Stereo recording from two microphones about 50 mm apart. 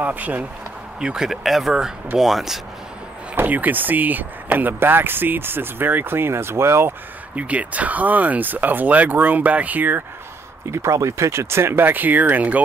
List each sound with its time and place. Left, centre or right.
0.0 s speech: right
1.0 s speech: centre
3.3 s speech: right
7.3 s speech: right
10.7 s speech: right